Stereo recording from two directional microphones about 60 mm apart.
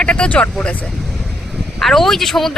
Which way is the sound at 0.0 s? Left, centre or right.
Centre.